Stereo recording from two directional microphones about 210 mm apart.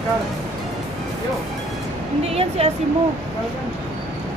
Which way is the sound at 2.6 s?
30° right (ahead or behind).